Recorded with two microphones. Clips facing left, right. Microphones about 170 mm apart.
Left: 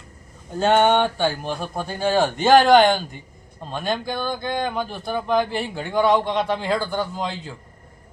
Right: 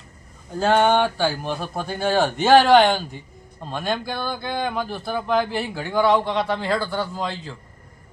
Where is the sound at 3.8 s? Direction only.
15° left (ahead or behind).